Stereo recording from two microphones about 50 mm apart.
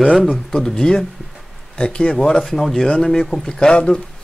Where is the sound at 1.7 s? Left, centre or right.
Left.